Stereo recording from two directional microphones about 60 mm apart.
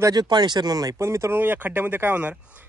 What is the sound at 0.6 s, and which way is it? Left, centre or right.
Speech, right.